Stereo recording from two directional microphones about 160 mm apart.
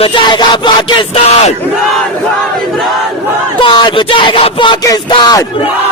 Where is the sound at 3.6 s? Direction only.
30° left (ahead or behind).